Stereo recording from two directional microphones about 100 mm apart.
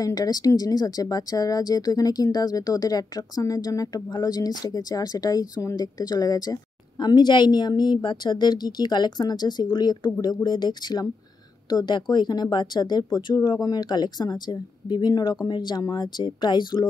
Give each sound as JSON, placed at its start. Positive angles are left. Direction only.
{"t": 0.0, "sound": "a woman's voice", "side_deg": 40}